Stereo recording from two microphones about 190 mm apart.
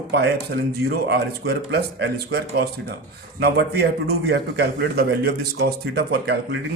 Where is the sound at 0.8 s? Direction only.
60° right (ahead or behind).